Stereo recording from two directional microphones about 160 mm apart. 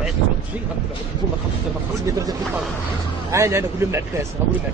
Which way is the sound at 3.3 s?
20° right (ahead or behind).